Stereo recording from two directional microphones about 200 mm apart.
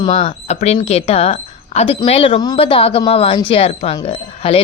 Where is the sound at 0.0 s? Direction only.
30° left (ahead or behind).